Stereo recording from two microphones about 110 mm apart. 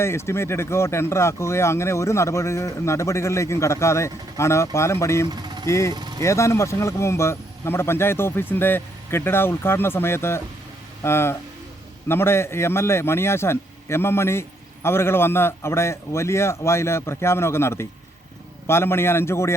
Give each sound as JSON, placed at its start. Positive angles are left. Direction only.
{"t": 0.0, "sound": "speech", "side_deg": 25}
{"t": 5.3, "sound": "vehicle", "side_deg": -40}
{"t": 5.6, "sound": "speech", "side_deg": 25}
{"t": 5.9, "sound": "speech", "side_deg": -40}
{"t": 6.2, "sound": "speech", "side_deg": 25}